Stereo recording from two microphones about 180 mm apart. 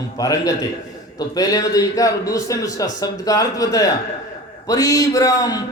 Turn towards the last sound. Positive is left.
turn(degrees=20)  # may be behind; listen again after turning